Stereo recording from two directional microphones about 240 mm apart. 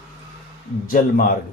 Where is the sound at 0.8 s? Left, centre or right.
Left.